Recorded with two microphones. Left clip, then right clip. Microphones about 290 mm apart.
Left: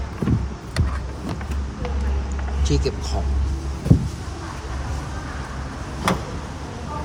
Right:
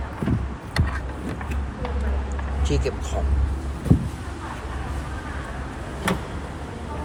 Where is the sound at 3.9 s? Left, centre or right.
Centre.